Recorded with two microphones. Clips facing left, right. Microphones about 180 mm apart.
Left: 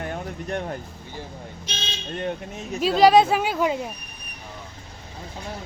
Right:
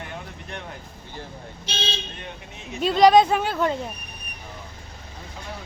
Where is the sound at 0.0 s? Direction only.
45° left (ahead or behind).